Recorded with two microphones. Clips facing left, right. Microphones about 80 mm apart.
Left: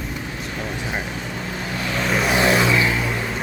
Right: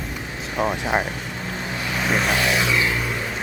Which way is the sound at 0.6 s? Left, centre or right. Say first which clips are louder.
Right 8 dB; right.